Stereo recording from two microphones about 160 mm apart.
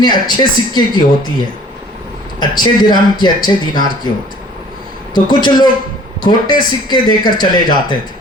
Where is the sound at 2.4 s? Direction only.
25° left (ahead or behind).